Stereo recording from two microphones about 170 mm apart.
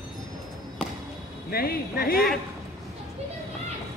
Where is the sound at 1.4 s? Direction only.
65° left (ahead or behind).